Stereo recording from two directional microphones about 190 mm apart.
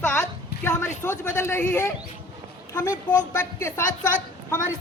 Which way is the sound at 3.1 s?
20° left (ahead or behind).